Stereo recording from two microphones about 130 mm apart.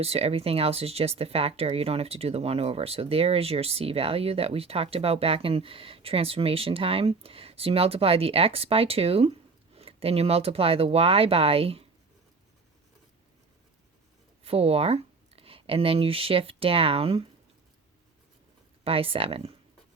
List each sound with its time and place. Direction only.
0.0 s speech: 50° right (ahead or behind)
14.4 s speech: 50° right (ahead or behind)
18.9 s speech: 45° right (ahead or behind)